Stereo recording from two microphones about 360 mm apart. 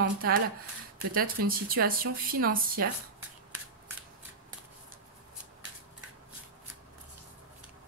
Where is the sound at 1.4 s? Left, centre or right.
Right.